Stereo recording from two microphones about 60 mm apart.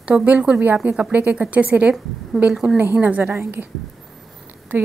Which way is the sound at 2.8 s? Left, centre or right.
Right.